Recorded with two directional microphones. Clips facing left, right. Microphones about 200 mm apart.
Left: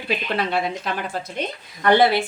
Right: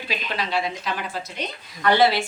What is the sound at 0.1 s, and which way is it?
Speech, 55° left (ahead or behind).